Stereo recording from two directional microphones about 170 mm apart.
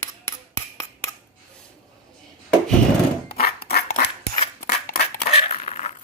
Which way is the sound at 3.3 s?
65° left (ahead or behind).